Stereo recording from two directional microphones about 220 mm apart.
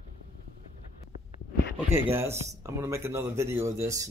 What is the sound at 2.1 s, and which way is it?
Speech, 10° right (ahead or behind).